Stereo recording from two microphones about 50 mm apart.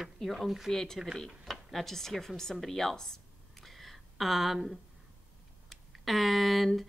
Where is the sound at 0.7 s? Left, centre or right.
Centre.